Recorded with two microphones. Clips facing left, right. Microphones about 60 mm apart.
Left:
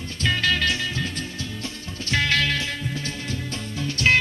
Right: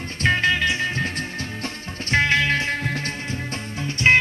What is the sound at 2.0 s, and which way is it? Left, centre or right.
Music, right.